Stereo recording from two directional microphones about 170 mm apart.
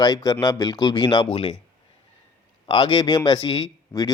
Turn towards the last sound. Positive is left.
turn(degrees=20)  # may be behind; listen again after turning